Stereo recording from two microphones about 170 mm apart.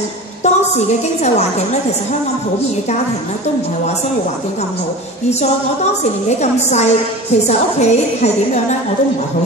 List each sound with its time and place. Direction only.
0.4 s a woman's voice: 40° left (ahead or behind)
6.2 s a woman's voice: 40° left (ahead or behind)